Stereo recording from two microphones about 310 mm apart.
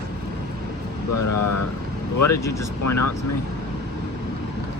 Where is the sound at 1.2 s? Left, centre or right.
Left.